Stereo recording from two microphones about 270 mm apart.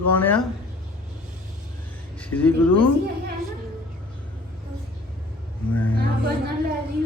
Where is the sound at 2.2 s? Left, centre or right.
Centre.